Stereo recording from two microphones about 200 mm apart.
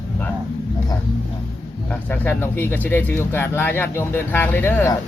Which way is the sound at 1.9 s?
10° left (ahead or behind).